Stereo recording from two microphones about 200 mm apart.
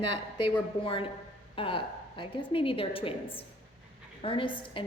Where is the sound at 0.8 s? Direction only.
25° left (ahead or behind).